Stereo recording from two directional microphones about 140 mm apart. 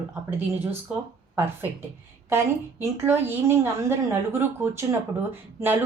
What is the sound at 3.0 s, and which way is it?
Speech, 15° right (ahead or behind).